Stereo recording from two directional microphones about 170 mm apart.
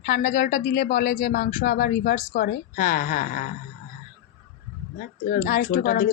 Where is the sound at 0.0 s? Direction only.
75° left (ahead or behind); by 3.5 s 55° left (ahead or behind).